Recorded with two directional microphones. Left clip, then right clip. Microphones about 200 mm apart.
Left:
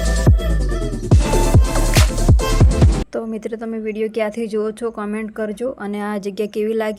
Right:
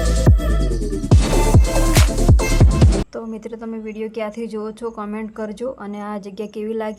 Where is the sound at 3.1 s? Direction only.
15° left (ahead or behind).